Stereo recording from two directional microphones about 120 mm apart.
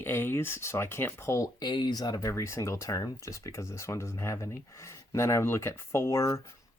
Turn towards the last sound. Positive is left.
turn(degrees=25)  # may be behind; listen again after turning